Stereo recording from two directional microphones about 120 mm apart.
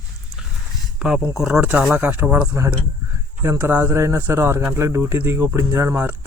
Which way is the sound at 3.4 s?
25° right (ahead or behind).